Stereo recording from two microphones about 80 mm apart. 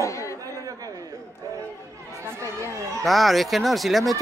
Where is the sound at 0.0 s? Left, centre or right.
Left.